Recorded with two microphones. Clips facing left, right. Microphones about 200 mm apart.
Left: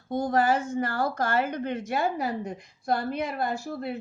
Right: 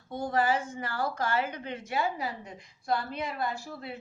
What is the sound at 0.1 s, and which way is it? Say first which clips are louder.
Speech: left 4 dB; 45° left (ahead or behind).